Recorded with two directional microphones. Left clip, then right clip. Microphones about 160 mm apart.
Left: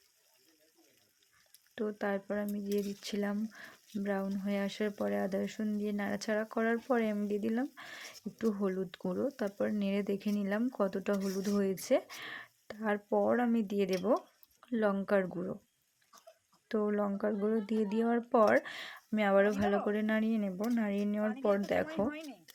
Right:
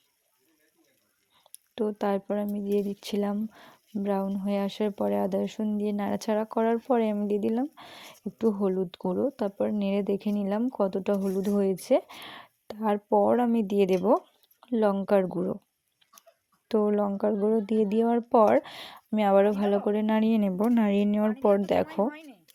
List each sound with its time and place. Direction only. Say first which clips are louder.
1.5 s speech: right 8 dB; 35° right (ahead or behind)
16.6 s speech: right 8 dB; 35° right (ahead or behind); by 21.2 s 50° right (ahead or behind)
21.4 s speech: right 8 dB; 40° right (ahead or behind)
22.0 s speech: right 6 dB; centre (ahead or behind)